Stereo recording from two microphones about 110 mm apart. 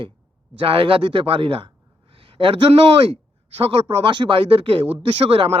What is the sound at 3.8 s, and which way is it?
A man's voice, 50° right (ahead or behind).